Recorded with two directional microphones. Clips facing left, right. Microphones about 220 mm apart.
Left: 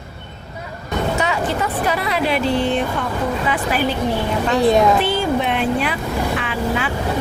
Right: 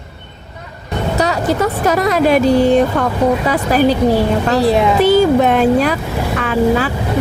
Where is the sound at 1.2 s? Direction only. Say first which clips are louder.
Right 5 dB; 40° right (ahead or behind).